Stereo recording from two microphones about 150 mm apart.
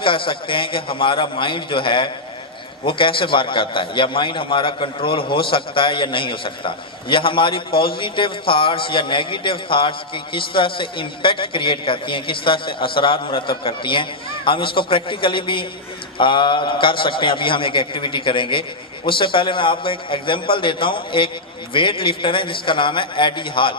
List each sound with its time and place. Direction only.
0.0 s a man's voice: 35° left (ahead or behind)